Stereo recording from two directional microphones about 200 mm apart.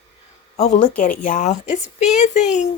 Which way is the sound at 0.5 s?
35° left (ahead or behind).